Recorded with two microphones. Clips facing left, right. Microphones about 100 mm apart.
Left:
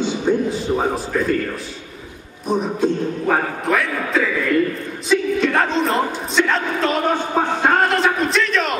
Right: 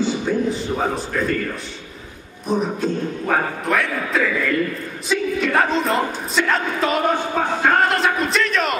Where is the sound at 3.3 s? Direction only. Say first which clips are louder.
Left 1 dB; centre (ahead or behind).